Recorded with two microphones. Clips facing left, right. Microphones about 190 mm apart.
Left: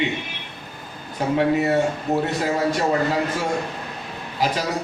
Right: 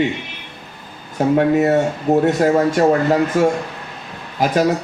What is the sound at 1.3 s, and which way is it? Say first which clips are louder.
A man's voice: right 4 dB; 50° right (ahead or behind).